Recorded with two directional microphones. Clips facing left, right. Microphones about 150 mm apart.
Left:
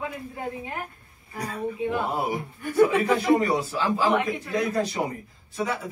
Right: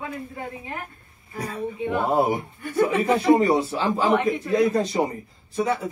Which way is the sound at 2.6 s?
Centre (ahead or behind).